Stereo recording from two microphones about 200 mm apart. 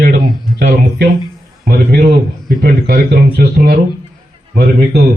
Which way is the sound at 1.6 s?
45° right (ahead or behind).